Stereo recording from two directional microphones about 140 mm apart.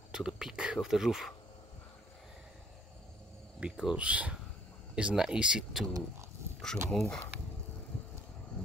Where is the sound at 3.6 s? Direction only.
5° right (ahead or behind).